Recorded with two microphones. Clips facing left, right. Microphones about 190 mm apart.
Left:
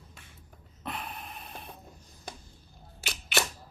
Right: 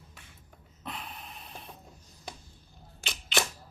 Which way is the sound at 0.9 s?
55° left (ahead or behind).